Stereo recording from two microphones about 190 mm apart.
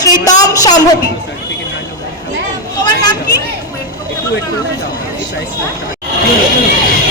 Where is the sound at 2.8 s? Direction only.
20° left (ahead or behind).